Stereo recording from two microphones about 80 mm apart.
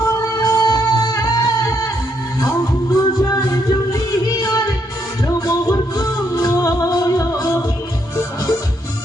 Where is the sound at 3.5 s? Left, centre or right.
Left.